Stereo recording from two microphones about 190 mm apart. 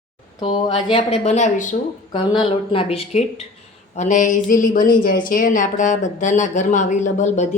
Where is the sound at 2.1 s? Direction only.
25° left (ahead or behind).